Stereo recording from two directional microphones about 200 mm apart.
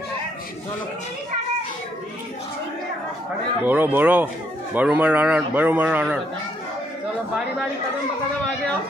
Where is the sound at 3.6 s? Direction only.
10° right (ahead or behind).